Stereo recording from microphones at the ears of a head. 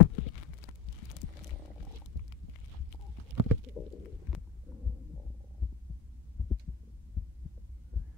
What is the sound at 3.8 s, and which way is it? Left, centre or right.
Stomach rumble, left.